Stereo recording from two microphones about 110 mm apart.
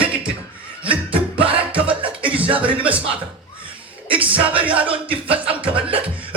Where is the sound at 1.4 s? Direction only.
10° right (ahead or behind).